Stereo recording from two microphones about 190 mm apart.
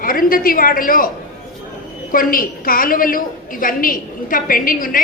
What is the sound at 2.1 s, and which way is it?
A woman's voice, 50° left (ahead or behind).